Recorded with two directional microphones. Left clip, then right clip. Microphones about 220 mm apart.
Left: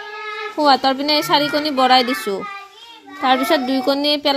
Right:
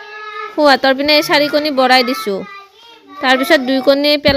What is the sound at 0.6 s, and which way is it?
A woman's voice, 30° right (ahead or behind).